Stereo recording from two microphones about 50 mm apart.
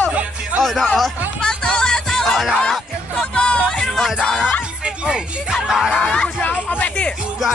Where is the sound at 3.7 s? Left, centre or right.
Centre.